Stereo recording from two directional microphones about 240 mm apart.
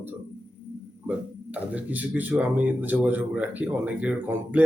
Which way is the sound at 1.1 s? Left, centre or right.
Centre.